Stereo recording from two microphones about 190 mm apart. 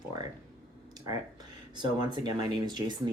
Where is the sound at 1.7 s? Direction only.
25° right (ahead or behind).